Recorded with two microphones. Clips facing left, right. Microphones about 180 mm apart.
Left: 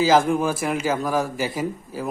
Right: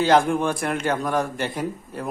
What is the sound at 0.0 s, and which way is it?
A man's voice, centre (ahead or behind).